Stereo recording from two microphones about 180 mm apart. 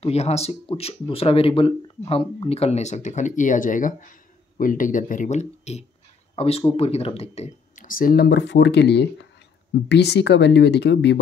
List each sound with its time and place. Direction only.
0.0 s speech: 35° left (ahead or behind); by 11.1 s 75° left (ahead or behind)